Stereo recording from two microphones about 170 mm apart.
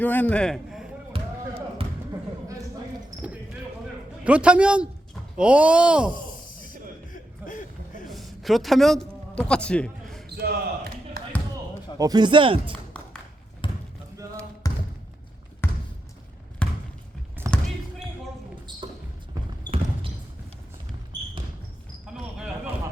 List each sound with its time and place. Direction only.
0.0 s a man's voice: 10° left (ahead or behind)
1.1 s basketball bounce: 30° right (ahead or behind)
4.2 s a man's voice: 5° right (ahead or behind)
7.1 s a sound: 50° left (ahead or behind)
8.1 s a sound: centre (ahead or behind)
10.2 s basketball bounce: 70° right (ahead or behind)
11.9 s speech: 25° right (ahead or behind)
13.6 s basketball bounce: 30° left (ahead or behind); by 16.8 s 5° left (ahead or behind)
17.5 s basketball bounce: 20° right (ahead or behind)
18.7 s basketball bounce: 25° right (ahead or behind)
22.0 s basketball bounce: 5° right (ahead or behind)